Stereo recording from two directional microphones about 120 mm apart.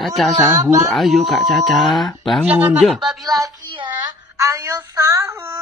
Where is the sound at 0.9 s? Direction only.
Centre (ahead or behind).